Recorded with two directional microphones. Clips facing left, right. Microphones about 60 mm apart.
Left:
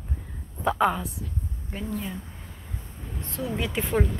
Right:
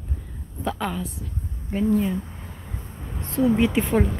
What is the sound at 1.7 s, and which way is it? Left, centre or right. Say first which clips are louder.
Speech: right 11 dB; centre.